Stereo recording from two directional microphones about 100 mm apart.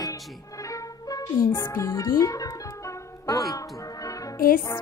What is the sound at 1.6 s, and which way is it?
Speech, 30° left (ahead or behind).